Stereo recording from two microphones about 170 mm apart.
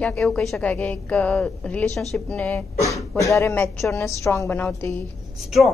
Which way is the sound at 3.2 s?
15° left (ahead or behind).